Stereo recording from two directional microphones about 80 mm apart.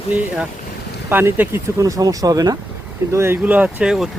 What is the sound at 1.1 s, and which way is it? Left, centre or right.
Speech, right.